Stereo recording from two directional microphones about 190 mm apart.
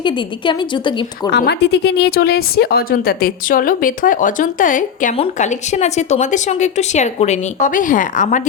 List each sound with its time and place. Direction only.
0.0 s a woman's voice: 25° left (ahead or behind)
1.3 s a woman's voice: 60° left (ahead or behind); by 8.4 s 40° left (ahead or behind)